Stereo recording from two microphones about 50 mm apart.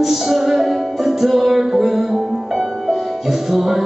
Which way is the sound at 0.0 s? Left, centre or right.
Centre.